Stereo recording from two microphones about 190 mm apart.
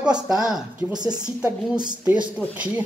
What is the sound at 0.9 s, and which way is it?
Speech, 20° right (ahead or behind).